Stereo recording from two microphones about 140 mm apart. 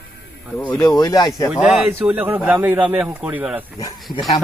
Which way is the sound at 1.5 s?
Centre (ahead or behind).